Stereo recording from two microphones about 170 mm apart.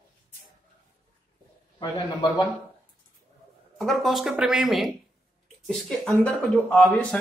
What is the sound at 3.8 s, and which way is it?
Speech, centre (ahead or behind).